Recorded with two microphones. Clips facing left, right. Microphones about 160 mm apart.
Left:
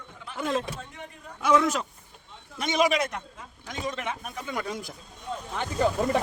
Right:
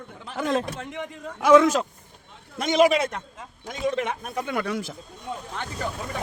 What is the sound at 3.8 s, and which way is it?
A man's voice, 65° right (ahead or behind).